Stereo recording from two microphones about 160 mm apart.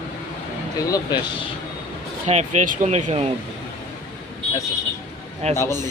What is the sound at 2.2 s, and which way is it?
Speech, 45° right (ahead or behind).